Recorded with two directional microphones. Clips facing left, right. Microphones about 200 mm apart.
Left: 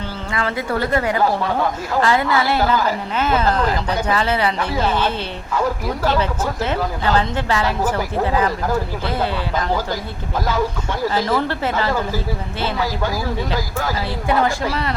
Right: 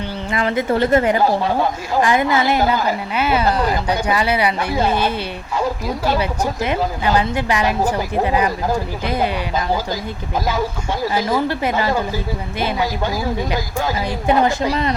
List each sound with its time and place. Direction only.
0.3 s a woman's voice: 20° right (ahead or behind)
11.1 s a woman's voice: 10° right (ahead or behind)